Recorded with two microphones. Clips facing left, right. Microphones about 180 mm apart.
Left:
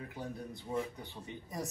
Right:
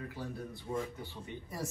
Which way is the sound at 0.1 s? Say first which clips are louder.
Right 1 dB; 20° left (ahead or behind).